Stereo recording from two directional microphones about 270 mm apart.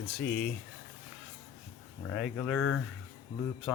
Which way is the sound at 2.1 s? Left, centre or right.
Centre.